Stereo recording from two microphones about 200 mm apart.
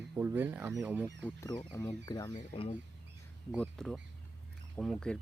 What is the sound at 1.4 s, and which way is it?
Speech, 20° left (ahead or behind).